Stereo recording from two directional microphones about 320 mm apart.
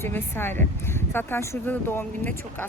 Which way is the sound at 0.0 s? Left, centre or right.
Centre.